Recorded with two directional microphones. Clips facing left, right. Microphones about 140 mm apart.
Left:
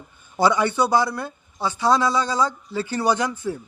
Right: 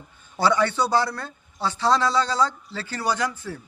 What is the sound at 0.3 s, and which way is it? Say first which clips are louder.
A man's voice: left 2 dB; 15° left (ahead or behind).